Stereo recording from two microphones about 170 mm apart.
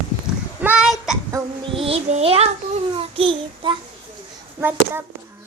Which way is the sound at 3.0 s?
30° right (ahead or behind).